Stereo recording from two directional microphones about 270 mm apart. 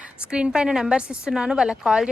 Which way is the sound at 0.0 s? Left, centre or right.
Centre.